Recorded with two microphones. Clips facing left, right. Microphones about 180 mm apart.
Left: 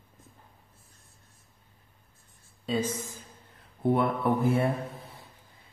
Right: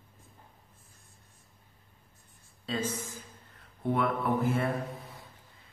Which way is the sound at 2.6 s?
15° left (ahead or behind).